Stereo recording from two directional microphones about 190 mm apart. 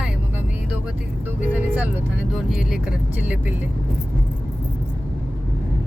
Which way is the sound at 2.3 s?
Centre (ahead or behind).